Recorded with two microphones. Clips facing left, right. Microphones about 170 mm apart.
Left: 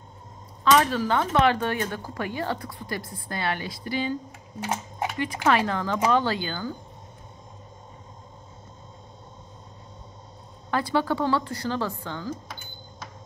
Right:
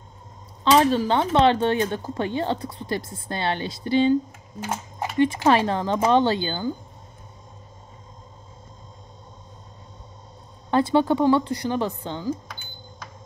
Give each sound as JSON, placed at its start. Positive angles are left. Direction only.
{"t": 0.7, "sound": "speech", "side_deg": -25}
{"t": 5.2, "sound": "speech", "side_deg": -25}
{"t": 10.7, "sound": "speech", "side_deg": -25}